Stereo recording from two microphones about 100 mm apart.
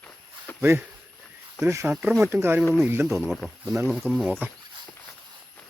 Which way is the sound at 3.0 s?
Centre (ahead or behind).